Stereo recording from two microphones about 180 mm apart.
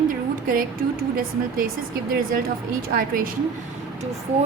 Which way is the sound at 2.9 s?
50° right (ahead or behind).